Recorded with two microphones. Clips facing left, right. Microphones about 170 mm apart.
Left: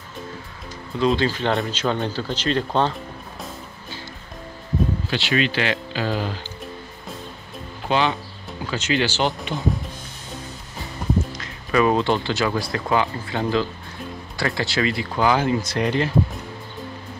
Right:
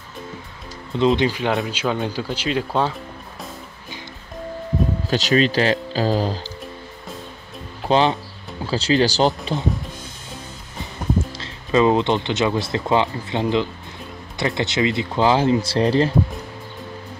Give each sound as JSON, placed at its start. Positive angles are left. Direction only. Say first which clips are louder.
{"t": 0.9, "sound": "speech", "louder": "right 2 dB", "side_deg": -20}
{"t": 5.1, "sound": "speech", "louder": "right 6 dB", "side_deg": -40}
{"t": 7.9, "sound": "speech", "louder": "right 4 dB", "side_deg": -35}
{"t": 11.3, "sound": "speech", "louder": "right 2 dB", "side_deg": -25}